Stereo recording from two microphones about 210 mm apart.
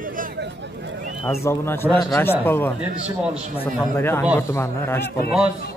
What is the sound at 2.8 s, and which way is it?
Speech, 5° right (ahead or behind).